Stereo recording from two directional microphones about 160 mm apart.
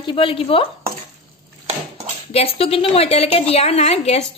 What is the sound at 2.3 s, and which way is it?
A woman's voice, 35° left (ahead or behind).